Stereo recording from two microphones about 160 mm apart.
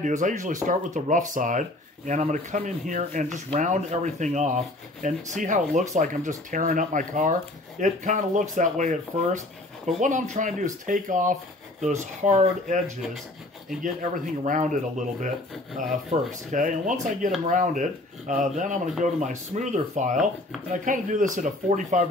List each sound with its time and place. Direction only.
0.0 s speech: 50° right (ahead or behind)
14.1 s speech: 55° right (ahead or behind)